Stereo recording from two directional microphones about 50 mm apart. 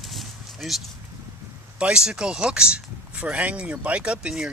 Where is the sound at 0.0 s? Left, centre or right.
Centre.